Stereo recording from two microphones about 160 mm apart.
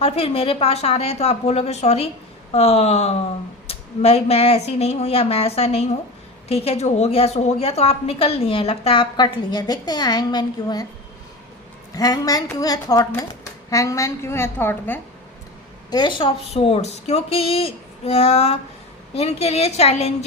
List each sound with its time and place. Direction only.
0.0 s a woman's voice: 40° left (ahead or behind)
11.9 s a woman's voice: 25° left (ahead or behind)
15.9 s a woman's voice: 30° left (ahead or behind)